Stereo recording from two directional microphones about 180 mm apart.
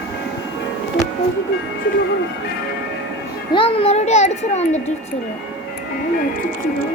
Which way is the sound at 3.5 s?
30° left (ahead or behind).